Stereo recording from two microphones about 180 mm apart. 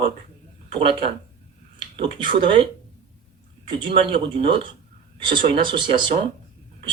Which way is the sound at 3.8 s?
30° right (ahead or behind).